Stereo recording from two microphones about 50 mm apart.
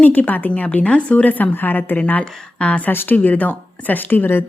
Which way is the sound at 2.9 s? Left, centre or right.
Left.